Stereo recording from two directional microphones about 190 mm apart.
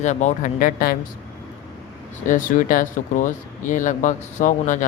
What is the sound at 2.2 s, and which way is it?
Speech, 45° left (ahead or behind).